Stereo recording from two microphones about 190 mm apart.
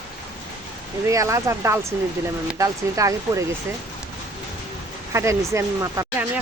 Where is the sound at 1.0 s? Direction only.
15° right (ahead or behind).